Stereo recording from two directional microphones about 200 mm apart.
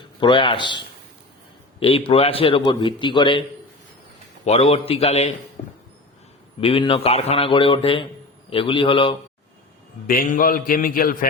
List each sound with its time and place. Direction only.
0.2 s a man's voice: 25° left (ahead or behind)
4.4 s a man's voice: 30° left (ahead or behind)
5.6 s a sound: 30° left (ahead or behind)
6.6 s a man's voice: 25° left (ahead or behind)
10.1 s a man's voice: 45° left (ahead or behind)